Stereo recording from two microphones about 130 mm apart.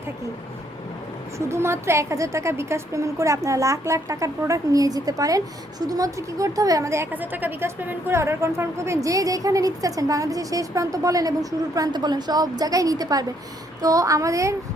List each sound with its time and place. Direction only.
1.4 s a woman's voice: 20° right (ahead or behind)